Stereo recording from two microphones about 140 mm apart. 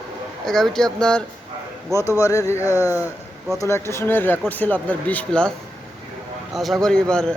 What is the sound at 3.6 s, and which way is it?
Speech, 20° left (ahead or behind).